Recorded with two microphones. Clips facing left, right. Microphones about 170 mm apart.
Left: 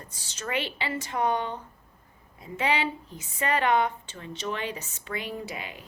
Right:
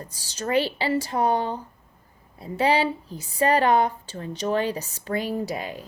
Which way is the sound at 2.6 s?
35° right (ahead or behind).